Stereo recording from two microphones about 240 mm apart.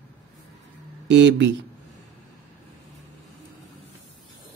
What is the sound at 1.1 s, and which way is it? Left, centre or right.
Speech, right.